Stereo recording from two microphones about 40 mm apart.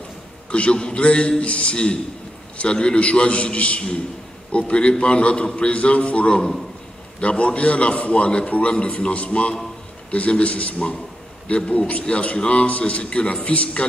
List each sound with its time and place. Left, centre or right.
0.5 s a man's voice: left